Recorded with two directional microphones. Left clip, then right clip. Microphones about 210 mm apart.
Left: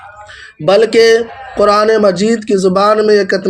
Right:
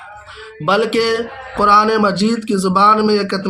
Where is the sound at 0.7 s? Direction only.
15° left (ahead or behind).